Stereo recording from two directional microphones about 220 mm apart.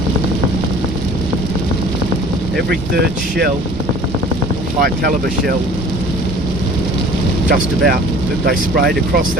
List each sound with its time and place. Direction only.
2.6 s speech: 45° right (ahead or behind)
4.8 s speech: 45° right (ahead or behind)
7.4 s speech: 40° right (ahead or behind)